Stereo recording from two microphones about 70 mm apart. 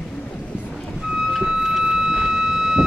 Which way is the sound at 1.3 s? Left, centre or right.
Centre.